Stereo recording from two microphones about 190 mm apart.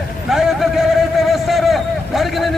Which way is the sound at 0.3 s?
Centre (ahead or behind).